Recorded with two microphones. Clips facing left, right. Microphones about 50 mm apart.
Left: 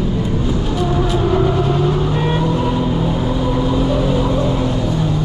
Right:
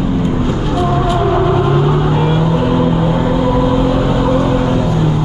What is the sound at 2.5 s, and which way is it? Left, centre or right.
Vehicle, right.